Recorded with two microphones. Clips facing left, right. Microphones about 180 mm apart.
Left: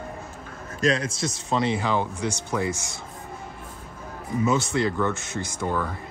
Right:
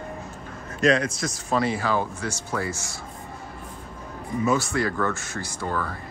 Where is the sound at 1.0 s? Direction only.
25° left (ahead or behind).